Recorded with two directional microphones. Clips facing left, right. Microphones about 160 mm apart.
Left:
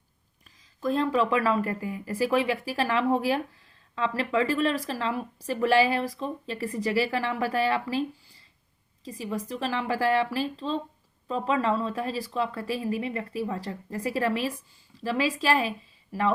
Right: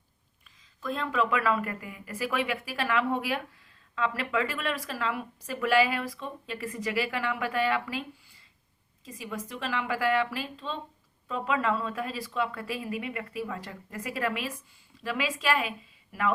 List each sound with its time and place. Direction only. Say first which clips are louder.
0.8 s speech: left 5 dB; 35° left (ahead or behind)
9.0 s speech: left 5 dB; 35° left (ahead or behind)